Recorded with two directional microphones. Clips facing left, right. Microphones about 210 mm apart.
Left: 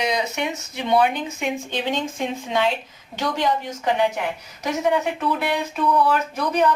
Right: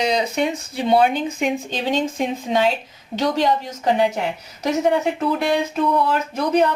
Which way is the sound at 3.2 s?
40° right (ahead or behind).